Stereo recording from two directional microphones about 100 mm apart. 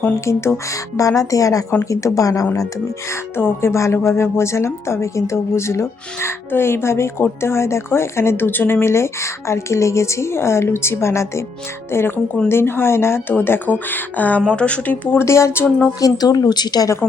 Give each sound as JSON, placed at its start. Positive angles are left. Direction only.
{"t": 0.3, "sound": "a woman's voice", "side_deg": 30}
{"t": 3.3, "sound": "a woman's voice", "side_deg": 25}
{"t": 15.2, "sound": "a woman's voice", "side_deg": 30}
{"t": 16.0, "sound": "a woman's voice", "side_deg": 40}